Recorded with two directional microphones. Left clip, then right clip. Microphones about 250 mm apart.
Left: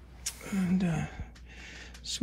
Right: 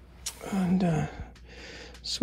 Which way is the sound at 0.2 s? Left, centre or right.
Centre.